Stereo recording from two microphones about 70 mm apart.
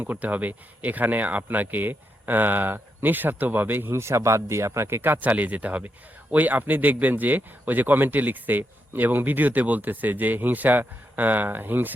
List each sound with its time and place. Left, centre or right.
0.0 s speech: right